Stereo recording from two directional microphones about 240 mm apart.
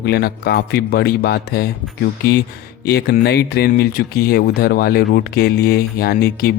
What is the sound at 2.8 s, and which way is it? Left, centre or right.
Speech, left.